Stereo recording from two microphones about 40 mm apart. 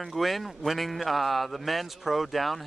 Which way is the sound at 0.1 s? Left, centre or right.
Centre.